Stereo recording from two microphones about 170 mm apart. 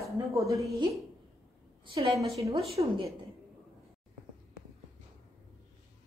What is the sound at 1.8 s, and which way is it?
A woman's voice, 25° right (ahead or behind).